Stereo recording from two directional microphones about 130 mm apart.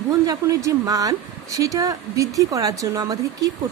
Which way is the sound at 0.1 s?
25° right (ahead or behind).